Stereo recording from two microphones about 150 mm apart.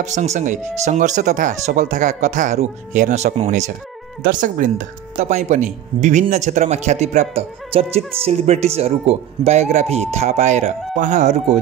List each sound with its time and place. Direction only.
0.0 s speech: 50° right (ahead or behind)
4.2 s speech: 60° right (ahead or behind)